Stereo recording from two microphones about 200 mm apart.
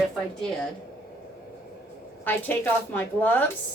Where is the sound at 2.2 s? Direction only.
10° left (ahead or behind).